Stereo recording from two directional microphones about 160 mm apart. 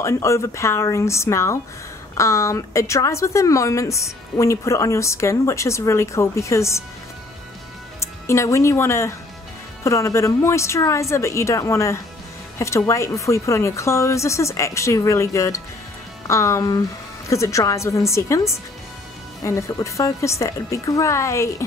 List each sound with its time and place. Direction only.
0.0 s a woman's voice: 20° left (ahead or behind)
8.0 s a woman's voice: 20° left (ahead or behind)